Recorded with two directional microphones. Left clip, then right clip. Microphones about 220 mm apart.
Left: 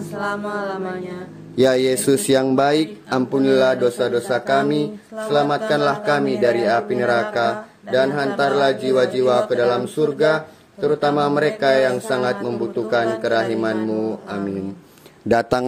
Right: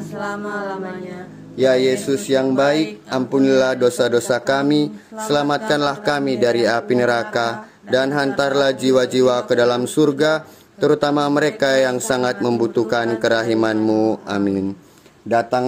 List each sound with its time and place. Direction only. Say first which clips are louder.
0.1 s mantra: left 1 dB; 20° left (ahead or behind)
1.6 s speech: right 1 dB; 40° left (ahead or behind)
3.3 s speech: right 1 dB; 15° right (ahead or behind); by 14.6 s 40° right (ahead or behind)
15.2 s speech: even; 35° left (ahead or behind)